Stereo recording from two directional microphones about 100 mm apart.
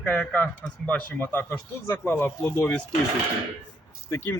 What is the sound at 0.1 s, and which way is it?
Speech, 15° left (ahead or behind).